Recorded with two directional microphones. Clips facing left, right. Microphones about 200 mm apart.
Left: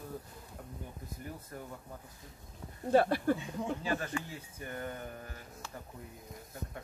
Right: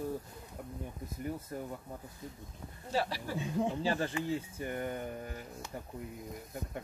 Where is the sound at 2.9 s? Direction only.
55° left (ahead or behind).